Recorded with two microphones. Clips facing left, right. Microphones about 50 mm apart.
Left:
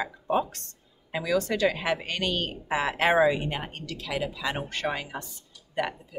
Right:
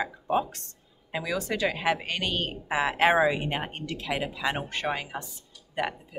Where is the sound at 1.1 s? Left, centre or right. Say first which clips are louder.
Left 3 dB; centre.